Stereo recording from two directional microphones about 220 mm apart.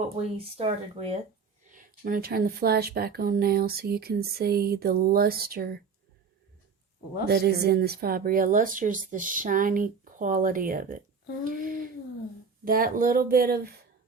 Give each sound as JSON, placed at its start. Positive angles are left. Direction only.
{"t": 0.2, "sound": "speech", "side_deg": -25}
{"t": 1.7, "sound": "speech", "side_deg": -40}
{"t": 7.3, "sound": "speech", "side_deg": -45}
{"t": 11.4, "sound": "a sound", "side_deg": -40}
{"t": 12.6, "sound": "speech", "side_deg": -40}